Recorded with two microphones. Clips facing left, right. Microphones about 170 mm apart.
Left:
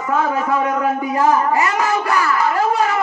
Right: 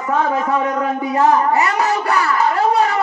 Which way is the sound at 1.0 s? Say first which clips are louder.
Right 4 dB; 35° right (ahead or behind).